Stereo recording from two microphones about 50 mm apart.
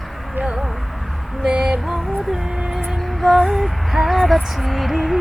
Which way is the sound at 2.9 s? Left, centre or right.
Centre.